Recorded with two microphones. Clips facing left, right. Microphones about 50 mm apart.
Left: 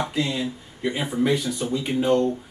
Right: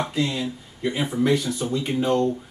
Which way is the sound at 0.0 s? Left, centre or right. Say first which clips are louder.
Even; centre.